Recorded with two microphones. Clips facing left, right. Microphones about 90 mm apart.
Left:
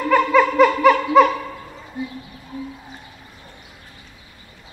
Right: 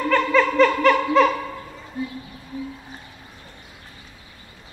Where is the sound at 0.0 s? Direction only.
10° left (ahead or behind).